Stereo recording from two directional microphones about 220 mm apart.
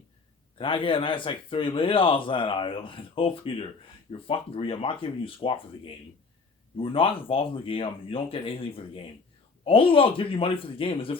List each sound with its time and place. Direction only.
0.6 s a man's voice: 25° left (ahead or behind)